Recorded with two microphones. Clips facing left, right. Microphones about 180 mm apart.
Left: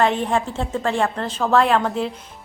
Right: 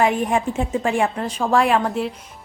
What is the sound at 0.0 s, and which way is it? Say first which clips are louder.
A woman's voice: right 1 dB; 10° right (ahead or behind).